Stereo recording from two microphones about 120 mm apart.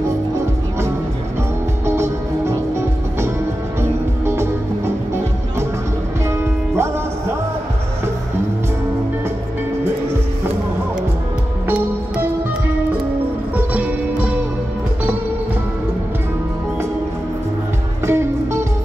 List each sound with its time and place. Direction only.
1.9 s music: 20° right (ahead or behind)
4.3 s music: 20° right (ahead or behind)
6.7 s music: 20° right (ahead or behind)
13.6 s music: 10° right (ahead or behind)
18.0 s music: 20° right (ahead or behind)